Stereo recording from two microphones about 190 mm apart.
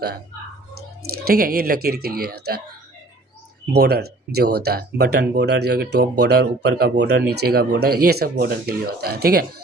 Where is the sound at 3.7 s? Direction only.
55° right (ahead or behind).